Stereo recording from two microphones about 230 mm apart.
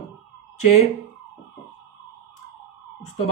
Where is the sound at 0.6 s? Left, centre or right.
Left.